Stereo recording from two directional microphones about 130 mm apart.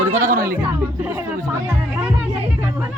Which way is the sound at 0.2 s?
90° right.